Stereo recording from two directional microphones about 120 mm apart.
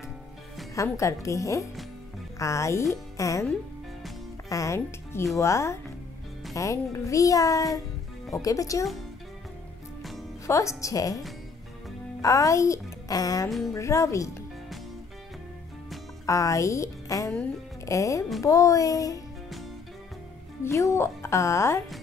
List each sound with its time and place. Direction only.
0.9 s a woman's voice: 25° left (ahead or behind)
4.5 s a woman's voice: 25° left (ahead or behind)
10.4 s a woman's voice: 25° left (ahead or behind)
16.3 s a woman's voice: 25° left (ahead or behind)
20.6 s a woman's voice: 20° left (ahead or behind)